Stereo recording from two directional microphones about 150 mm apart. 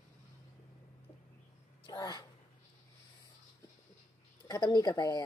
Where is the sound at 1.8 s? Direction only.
25° left (ahead or behind).